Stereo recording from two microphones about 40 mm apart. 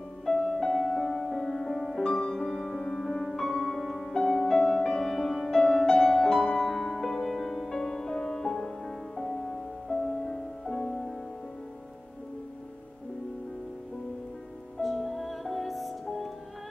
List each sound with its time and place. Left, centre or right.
0.2 s music: centre
3.3 s music: centre
4.1 s music: centre
5.6 s music: centre
14.8 s music: centre